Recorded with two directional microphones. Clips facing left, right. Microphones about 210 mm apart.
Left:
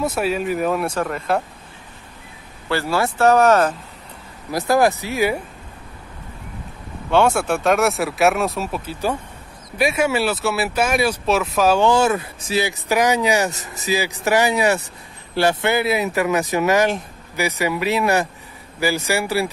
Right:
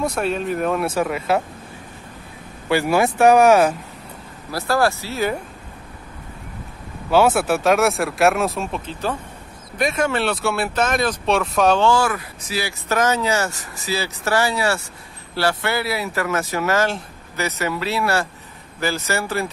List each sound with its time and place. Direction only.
0.0 s speech: 5° left (ahead or behind)
2.7 s speech: 15° right (ahead or behind)
4.5 s speech: 15° left (ahead or behind)
7.1 s speech: 5° right (ahead or behind)
11.8 s speech: 20° left (ahead or behind)